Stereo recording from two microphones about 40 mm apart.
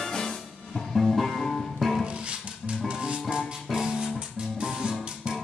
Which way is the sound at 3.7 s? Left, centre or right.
Centre.